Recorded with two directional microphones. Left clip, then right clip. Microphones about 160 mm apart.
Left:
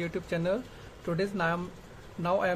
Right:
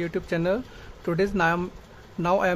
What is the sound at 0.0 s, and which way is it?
Speech, 25° right (ahead or behind).